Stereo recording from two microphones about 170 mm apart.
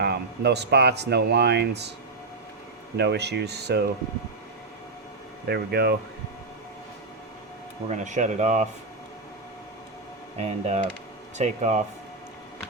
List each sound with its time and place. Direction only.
0.0 s speech: 80° right
2.9 s speech: 80° right
5.5 s speech: 70° right (ahead or behind)
7.9 s speech: 45° right (ahead or behind)
10.3 s speech: 40° right (ahead or behind)